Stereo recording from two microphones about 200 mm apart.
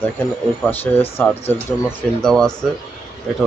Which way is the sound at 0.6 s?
10° left (ahead or behind).